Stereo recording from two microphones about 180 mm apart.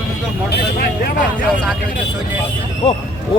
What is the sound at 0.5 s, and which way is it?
Vehicle, 60° left (ahead or behind).